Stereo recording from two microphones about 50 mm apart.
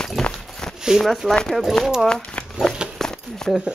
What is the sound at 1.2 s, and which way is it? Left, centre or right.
Speech, centre.